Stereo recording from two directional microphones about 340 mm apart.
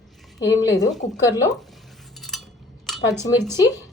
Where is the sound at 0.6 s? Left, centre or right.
Centre.